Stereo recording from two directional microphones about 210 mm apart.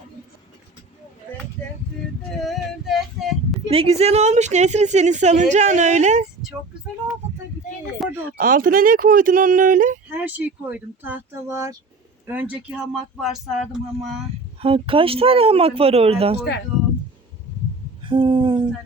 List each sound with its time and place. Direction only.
2.3 s male singing: centre (ahead or behind)
3.7 s a woman's voice: 30° right (ahead or behind)
8.0 s speech: centre (ahead or behind)
8.4 s a woman's voice: 40° right (ahead or behind)
10.2 s speech: 10° right (ahead or behind)
14.6 s speech: 25° right (ahead or behind)
18.0 s speech: 20° right (ahead or behind)